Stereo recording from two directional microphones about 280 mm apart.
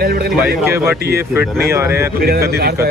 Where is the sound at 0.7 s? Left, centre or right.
Centre.